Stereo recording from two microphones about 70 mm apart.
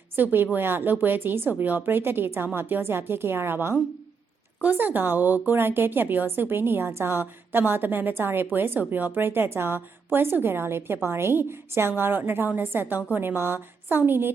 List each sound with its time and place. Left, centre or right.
0.2 s a woman's voice: right